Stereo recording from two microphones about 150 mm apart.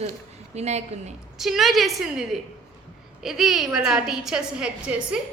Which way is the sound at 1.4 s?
Centre (ahead or behind).